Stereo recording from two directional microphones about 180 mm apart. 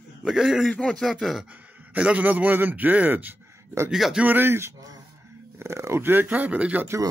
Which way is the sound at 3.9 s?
Centre (ahead or behind).